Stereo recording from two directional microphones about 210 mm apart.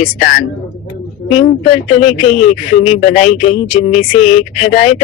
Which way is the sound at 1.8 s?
30° left (ahead or behind).